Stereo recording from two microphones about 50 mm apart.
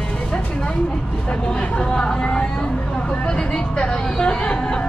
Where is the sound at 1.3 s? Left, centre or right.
Left.